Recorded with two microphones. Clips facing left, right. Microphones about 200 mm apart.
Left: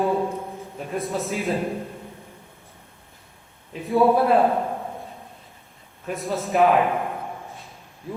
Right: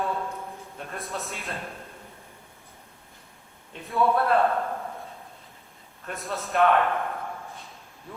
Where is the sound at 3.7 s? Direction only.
Centre (ahead or behind).